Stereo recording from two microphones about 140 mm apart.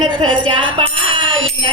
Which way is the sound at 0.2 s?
40° right (ahead or behind).